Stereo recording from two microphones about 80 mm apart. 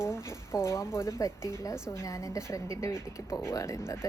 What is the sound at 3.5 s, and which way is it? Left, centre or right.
Speech, left.